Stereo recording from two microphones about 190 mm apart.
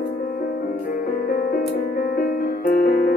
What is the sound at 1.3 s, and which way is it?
Music, 45° left (ahead or behind).